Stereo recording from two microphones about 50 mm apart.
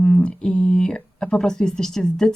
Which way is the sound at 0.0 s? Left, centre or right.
Left.